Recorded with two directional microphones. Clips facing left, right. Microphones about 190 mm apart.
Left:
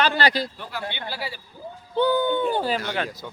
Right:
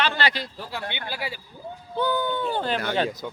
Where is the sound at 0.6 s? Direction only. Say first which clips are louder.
Even; 30° right (ahead or behind).